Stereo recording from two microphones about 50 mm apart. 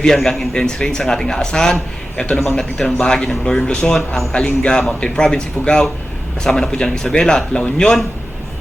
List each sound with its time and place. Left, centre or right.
0.0 s a man's voice: centre